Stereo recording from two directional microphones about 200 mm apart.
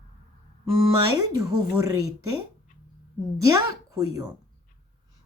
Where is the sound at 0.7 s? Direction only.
20° right (ahead or behind).